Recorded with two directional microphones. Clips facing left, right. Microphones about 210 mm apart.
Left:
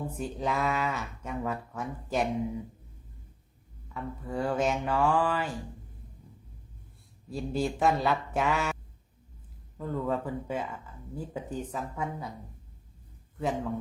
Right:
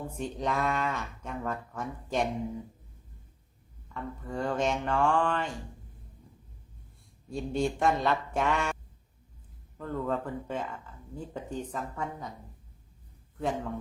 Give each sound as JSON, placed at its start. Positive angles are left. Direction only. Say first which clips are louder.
{"t": 0.1, "sound": "speech", "louder": "right 3 dB", "side_deg": 5}
{"t": 3.8, "sound": "speech", "louder": "left 1 dB", "side_deg": 5}
{"t": 7.3, "sound": "speech", "louder": "right 1 dB", "side_deg": 5}
{"t": 13.4, "sound": "speech", "louder": "left 1 dB", "side_deg": 0}